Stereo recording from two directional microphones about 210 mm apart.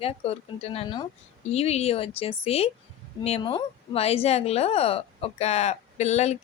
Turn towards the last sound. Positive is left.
turn(degrees=30)  # may be behind; listen again after turning